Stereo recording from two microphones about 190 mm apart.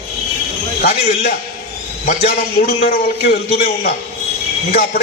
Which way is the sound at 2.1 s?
50° left (ahead or behind).